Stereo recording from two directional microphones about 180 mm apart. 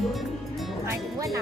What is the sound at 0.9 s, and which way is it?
Speech, 20° right (ahead or behind).